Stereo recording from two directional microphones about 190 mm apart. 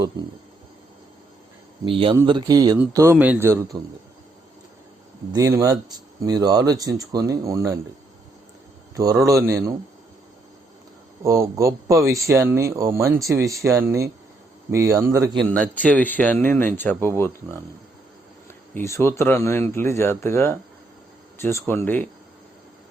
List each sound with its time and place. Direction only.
1.8 s speech: 25° right (ahead or behind)
5.3 s speech: 15° right (ahead or behind)
9.2 s speech: 15° right (ahead or behind)
11.2 s speech: 15° right (ahead or behind)
15.5 s speech: 5° left (ahead or behind)
18.9 s speech: 15° left (ahead or behind)